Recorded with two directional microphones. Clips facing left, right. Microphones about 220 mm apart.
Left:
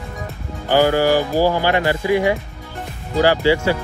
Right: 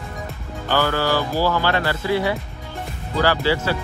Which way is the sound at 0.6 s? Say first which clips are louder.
Left 6 dB; 15° left (ahead or behind).